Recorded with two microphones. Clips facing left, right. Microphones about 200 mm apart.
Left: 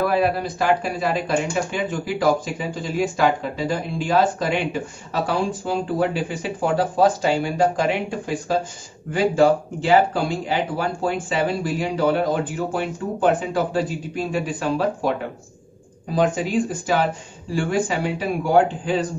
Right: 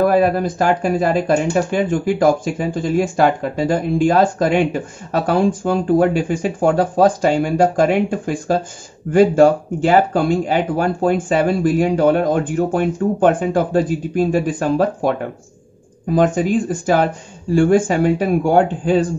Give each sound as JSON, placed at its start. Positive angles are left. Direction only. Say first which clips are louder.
{"t": 0.0, "sound": "speech", "louder": "right 6 dB", "side_deg": -45}